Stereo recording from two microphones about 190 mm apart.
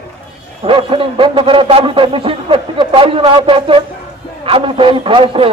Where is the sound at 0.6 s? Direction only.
30° right (ahead or behind).